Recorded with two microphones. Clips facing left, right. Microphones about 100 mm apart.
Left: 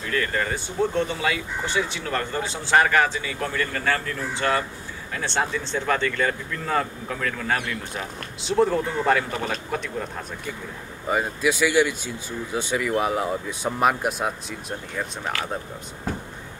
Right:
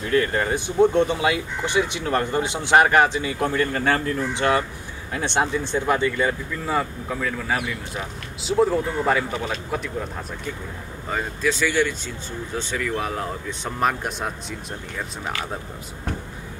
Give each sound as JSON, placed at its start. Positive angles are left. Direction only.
{"t": 0.0, "sound": "speech", "side_deg": -30}
{"t": 11.1, "sound": "speech", "side_deg": 10}